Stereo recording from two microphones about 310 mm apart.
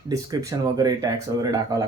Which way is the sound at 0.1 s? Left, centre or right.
Centre.